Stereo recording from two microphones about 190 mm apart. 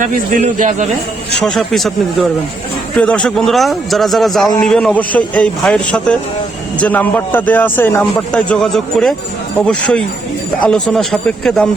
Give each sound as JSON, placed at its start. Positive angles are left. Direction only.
{"t": 0.0, "sound": "a man's voice", "side_deg": -45}
{"t": 1.4, "sound": "a man's voice", "side_deg": 0}
{"t": 2.9, "sound": "a man's voice", "side_deg": 5}